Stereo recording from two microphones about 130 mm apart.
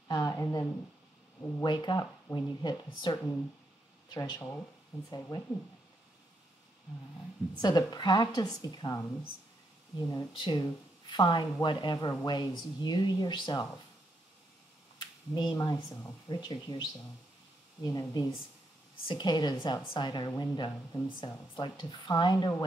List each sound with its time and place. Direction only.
0.1 s a woman's voice: 30° left (ahead or behind)
4.4 s speech: 20° left (ahead or behind)
5.3 s a woman's voice: 35° left (ahead or behind)
7.6 s a woman's voice: 30° left (ahead or behind)
10.3 s a woman's voice: 35° left (ahead or behind)
15.0 s speech: 35° left (ahead or behind)
15.9 s speech: 20° left (ahead or behind)
16.3 s a woman's voice: 35° left (ahead or behind)
17.8 s a woman's voice: 25° left (ahead or behind)